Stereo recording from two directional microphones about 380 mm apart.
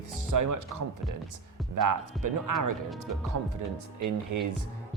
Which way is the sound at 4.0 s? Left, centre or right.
Right.